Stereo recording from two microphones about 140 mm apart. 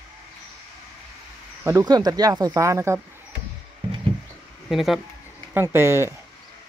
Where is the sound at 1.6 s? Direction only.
20° right (ahead or behind).